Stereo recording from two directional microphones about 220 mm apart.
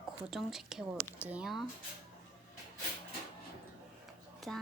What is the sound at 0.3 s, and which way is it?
Speech, centre (ahead or behind).